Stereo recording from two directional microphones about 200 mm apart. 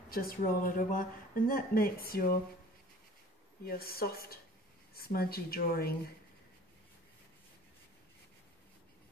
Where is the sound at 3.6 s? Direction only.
50° left (ahead or behind).